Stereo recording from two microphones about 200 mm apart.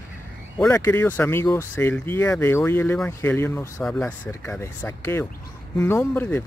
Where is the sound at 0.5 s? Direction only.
15° left (ahead or behind).